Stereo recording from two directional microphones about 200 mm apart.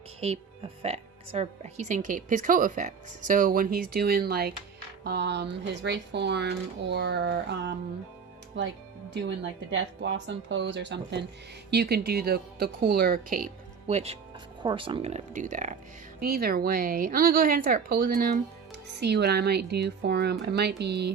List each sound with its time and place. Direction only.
0.2 s a woman's voice: 30° right (ahead or behind)
16.2 s speech: 50° right (ahead or behind)